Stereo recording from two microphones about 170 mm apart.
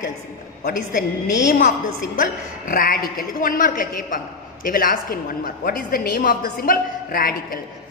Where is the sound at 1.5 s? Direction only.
55° left (ahead or behind).